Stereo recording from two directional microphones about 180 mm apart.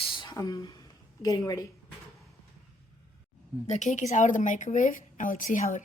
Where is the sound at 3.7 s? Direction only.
40° left (ahead or behind).